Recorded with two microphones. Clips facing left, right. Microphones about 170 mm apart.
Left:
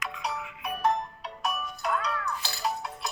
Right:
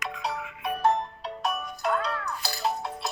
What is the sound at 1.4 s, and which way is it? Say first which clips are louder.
Music: right 2 dB; 25° right (ahead or behind).